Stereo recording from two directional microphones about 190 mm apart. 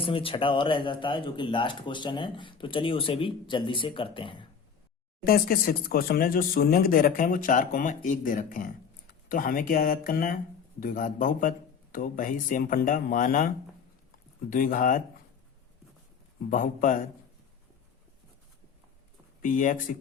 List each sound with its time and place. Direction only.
0.0 s speech: 30° left (ahead or behind)
5.2 s speech: 50° left (ahead or behind)
14.5 s speech: 45° left (ahead or behind)
16.5 s speech: 45° left (ahead or behind)
19.4 s speech: 45° left (ahead or behind)